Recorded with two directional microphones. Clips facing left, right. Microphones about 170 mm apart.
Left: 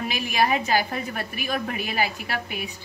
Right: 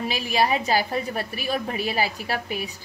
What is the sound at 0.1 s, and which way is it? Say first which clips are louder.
A woman's voice: even; 30° right (ahead or behind).